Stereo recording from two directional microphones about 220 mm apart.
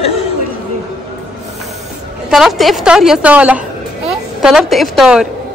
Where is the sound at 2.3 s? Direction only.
Centre (ahead or behind).